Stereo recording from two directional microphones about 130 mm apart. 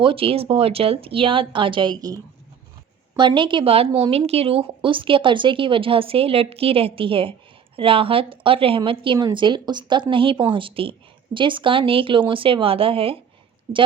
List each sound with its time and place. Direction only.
0.0 s speech: 45° right (ahead or behind)
3.2 s speech: 40° right (ahead or behind)